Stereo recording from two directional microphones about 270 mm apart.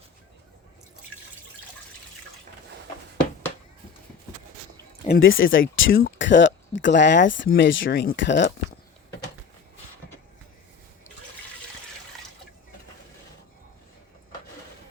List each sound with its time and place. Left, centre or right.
5.0 s speech: left